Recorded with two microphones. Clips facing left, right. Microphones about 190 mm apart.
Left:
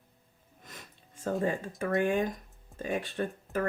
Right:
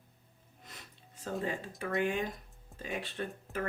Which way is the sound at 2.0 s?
50° left (ahead or behind).